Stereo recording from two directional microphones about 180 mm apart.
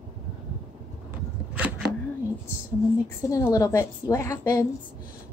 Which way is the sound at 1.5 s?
10° right (ahead or behind).